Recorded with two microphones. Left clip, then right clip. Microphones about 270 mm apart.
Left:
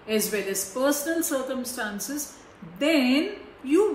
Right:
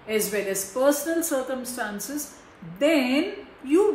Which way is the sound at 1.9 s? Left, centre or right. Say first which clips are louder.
Even; right.